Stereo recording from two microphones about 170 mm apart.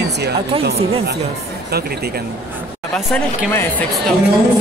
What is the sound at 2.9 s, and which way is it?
Speech, 10° left (ahead or behind).